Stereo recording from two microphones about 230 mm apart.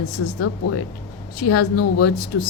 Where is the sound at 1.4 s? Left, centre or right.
Left.